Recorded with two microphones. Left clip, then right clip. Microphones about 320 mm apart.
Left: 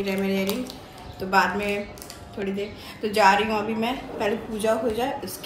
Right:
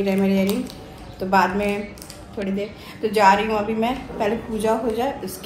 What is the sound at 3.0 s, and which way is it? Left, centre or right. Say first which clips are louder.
A woman's voice: right 3 dB; centre.